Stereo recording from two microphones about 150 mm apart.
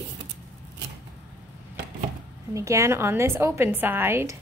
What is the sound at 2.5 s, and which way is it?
A woman's voice, 20° right (ahead or behind).